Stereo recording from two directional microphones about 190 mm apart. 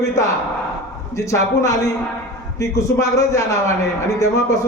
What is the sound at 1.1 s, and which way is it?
A man's voice, 15° left (ahead or behind).